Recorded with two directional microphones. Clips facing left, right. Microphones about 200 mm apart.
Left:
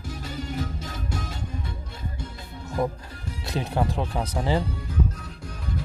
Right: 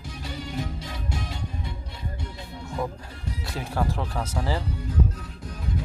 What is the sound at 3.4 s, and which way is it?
Speech, 20° left (ahead or behind).